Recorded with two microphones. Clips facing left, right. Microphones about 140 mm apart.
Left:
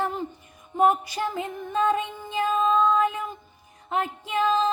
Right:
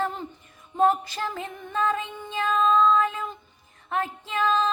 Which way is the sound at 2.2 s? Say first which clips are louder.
Even; 15° left (ahead or behind).